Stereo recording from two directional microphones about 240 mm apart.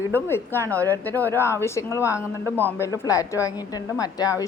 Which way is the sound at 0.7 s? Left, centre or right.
Centre.